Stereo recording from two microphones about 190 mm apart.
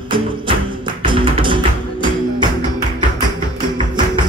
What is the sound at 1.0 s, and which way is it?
Music, 25° right (ahead or behind).